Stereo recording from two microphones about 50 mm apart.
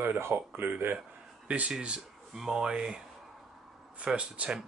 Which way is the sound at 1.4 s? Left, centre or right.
Right.